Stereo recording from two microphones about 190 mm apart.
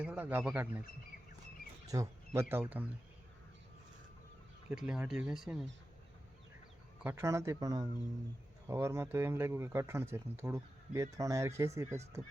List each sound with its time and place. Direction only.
0.0 s speech: 10° right (ahead or behind)
1.9 s speech: 15° right (ahead or behind)
4.7 s speech: 5° right (ahead or behind)
7.0 s speech: 15° right (ahead or behind)